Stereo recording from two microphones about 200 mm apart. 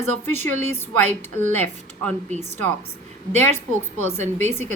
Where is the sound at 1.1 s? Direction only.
35° right (ahead or behind).